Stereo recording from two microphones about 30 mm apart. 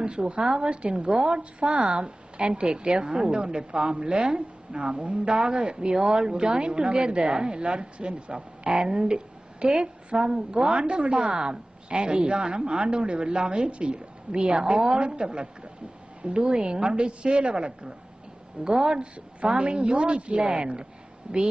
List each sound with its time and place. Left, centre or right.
0.0 s a woman's voice: right
15.0 s a woman's voice: right
19.4 s a woman's voice: right